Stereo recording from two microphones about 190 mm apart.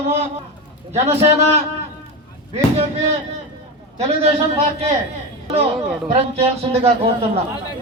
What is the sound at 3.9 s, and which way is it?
Speech, 35° right (ahead or behind).